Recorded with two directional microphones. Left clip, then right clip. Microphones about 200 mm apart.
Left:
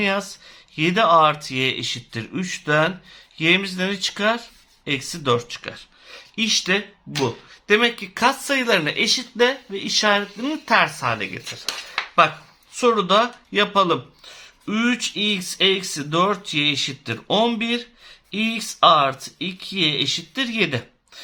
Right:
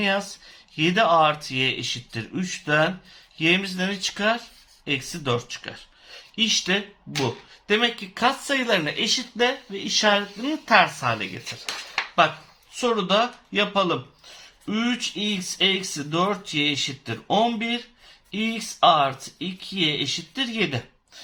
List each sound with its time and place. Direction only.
0.0 s speech: 35° left (ahead or behind)
12.7 s speech: 40° left (ahead or behind)